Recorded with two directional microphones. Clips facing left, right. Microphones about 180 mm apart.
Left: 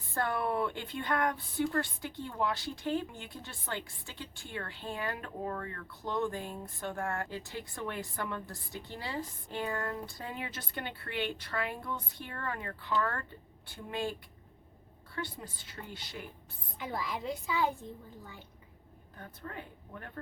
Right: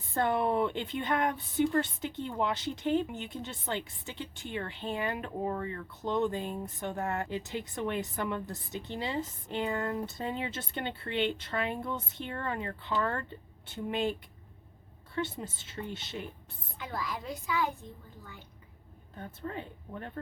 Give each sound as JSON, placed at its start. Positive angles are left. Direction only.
{"t": 0.1, "sound": "speech", "side_deg": -20}
{"t": 16.7, "sound": "a child's voice", "side_deg": 25}
{"t": 19.1, "sound": "speech", "side_deg": -25}